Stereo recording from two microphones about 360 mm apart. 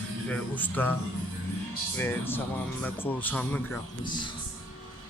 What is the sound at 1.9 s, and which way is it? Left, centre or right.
A man's voice, centre.